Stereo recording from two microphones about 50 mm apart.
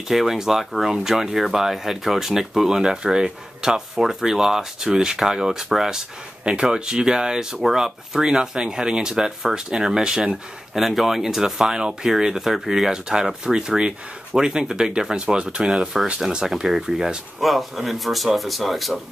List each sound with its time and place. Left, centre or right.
0.1 s speech: centre